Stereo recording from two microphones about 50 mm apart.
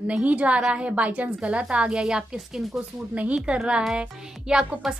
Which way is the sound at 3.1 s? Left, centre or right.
Right.